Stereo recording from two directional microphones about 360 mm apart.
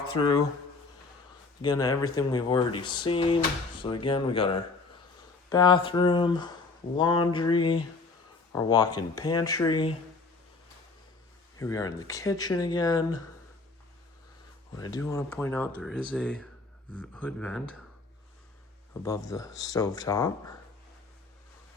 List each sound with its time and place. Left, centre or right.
0.1 s speech: centre
1.6 s speech: centre
11.5 s speech: centre
14.8 s speech: centre
19.0 s speech: centre